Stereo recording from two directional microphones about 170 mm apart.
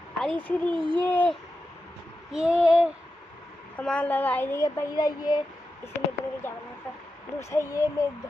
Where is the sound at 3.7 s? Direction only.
5° left (ahead or behind); by 5.4 s 25° left (ahead or behind).